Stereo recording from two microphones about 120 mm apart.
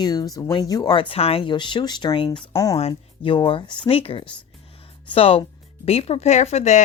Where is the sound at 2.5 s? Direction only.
30° left (ahead or behind).